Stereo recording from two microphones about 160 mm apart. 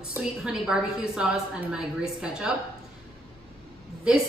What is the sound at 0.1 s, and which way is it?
A woman's voice, 5° right (ahead or behind).